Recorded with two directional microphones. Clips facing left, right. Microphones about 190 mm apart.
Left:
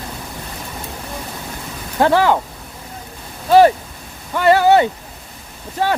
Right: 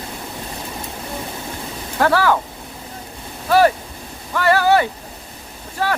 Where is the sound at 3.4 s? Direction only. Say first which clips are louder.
Left 4 dB; 25° left (ahead or behind).